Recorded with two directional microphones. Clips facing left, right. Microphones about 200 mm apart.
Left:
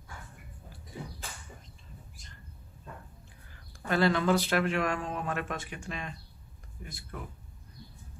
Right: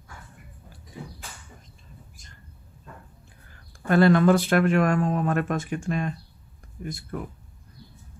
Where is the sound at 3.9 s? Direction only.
50° right (ahead or behind).